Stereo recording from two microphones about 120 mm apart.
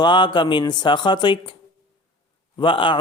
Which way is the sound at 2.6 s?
45° left (ahead or behind).